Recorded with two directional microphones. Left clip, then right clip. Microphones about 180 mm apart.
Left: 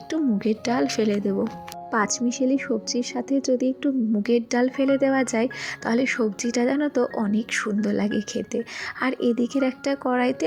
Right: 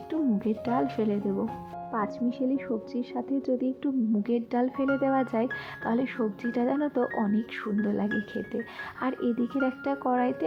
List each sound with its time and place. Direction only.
0.1 s speech: 15° left (ahead or behind)